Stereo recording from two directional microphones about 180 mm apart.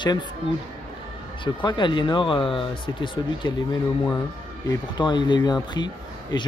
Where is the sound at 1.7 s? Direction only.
25° left (ahead or behind).